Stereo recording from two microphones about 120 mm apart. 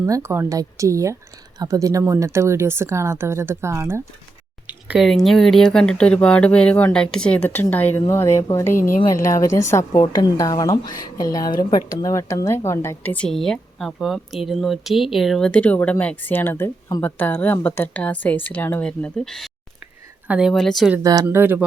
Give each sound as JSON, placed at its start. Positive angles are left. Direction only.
{"t": 0.0, "sound": "speech", "side_deg": -25}
{"t": 4.6, "sound": "a sound", "side_deg": -10}
{"t": 5.0, "sound": "speech", "side_deg": 0}
{"t": 20.2, "sound": "a woman's voice", "side_deg": -10}
{"t": 20.5, "sound": "speech", "side_deg": 0}
{"t": 21.0, "sound": "speech", "side_deg": -30}
{"t": 21.2, "sound": "speech", "side_deg": -15}